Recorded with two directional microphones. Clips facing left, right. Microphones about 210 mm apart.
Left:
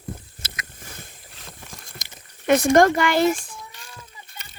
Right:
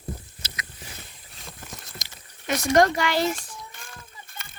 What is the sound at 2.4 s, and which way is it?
Speech, 55° left (ahead or behind).